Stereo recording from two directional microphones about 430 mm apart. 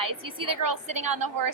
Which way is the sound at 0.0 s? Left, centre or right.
Right.